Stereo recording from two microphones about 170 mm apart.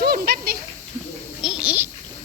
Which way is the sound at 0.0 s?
65° right (ahead or behind).